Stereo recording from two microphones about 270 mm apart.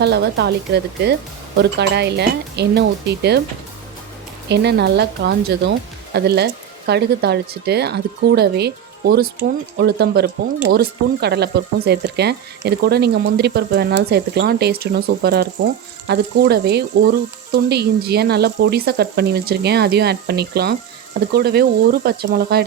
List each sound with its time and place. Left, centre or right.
0.0 s speech: right
4.4 s speech: right